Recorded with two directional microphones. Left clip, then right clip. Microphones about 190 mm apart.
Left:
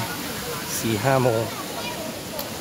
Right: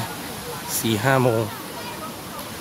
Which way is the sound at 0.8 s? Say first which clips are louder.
Right 1 dB; 30° right (ahead or behind).